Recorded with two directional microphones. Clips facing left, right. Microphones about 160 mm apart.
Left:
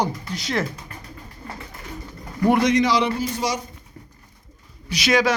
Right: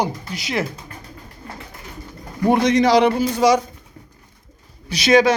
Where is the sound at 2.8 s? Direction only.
45° right (ahead or behind).